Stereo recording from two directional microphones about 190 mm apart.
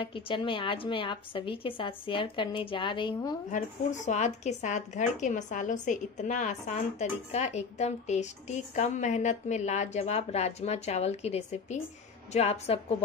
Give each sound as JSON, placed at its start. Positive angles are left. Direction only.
{"t": 0.0, "sound": "a woman's voice", "side_deg": 25}
{"t": 4.0, "sound": "a woman's voice", "side_deg": 40}